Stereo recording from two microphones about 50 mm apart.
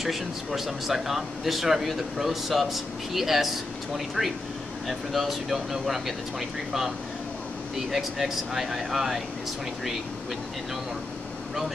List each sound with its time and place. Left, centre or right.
0.0 s a man's voice: centre
7.9 s a man's voice: centre